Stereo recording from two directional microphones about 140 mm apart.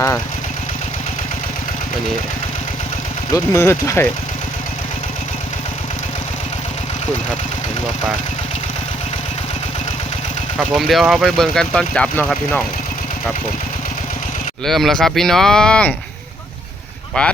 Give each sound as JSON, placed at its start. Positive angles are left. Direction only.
{"t": 3.3, "sound": "speech", "side_deg": 20}
{"t": 10.6, "sound": "speech", "side_deg": 0}
{"t": 14.6, "sound": "speech", "side_deg": 0}
{"t": 17.2, "sound": "speech", "side_deg": 10}